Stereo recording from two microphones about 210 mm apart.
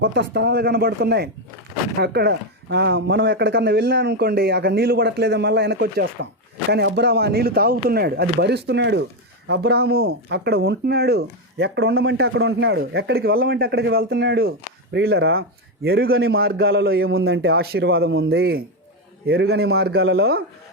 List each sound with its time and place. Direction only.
0.0 s speech: 50° right (ahead or behind)
18.1 s a man's voice: 70° right (ahead or behind)
18.3 s speech: 50° right (ahead or behind)